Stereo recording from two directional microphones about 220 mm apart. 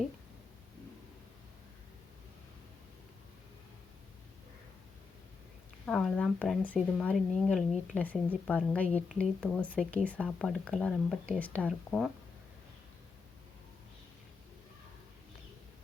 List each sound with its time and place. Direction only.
5.8 s a woman's voice: centre (ahead or behind)